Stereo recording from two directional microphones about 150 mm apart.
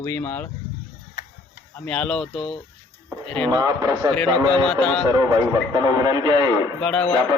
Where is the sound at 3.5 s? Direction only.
25° right (ahead or behind).